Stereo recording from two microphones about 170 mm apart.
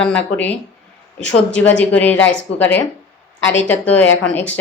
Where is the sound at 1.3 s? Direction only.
90° left.